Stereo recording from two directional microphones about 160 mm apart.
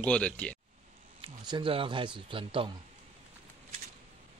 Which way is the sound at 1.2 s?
30° right (ahead or behind).